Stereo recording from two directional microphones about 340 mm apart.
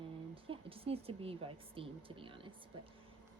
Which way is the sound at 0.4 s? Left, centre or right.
Centre.